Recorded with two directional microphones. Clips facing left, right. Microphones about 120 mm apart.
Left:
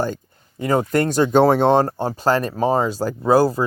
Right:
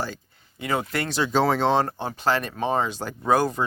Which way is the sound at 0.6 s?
40° left (ahead or behind).